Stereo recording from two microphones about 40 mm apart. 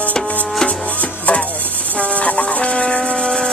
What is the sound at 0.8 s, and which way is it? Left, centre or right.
Music, left.